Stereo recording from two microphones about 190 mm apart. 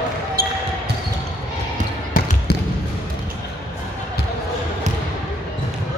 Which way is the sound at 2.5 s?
55° left (ahead or behind).